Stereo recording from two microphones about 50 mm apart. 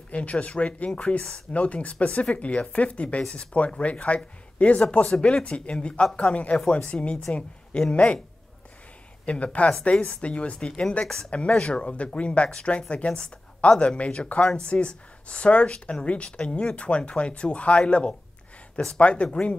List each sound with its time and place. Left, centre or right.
0.1 s speech: left
9.2 s a woman's voice: left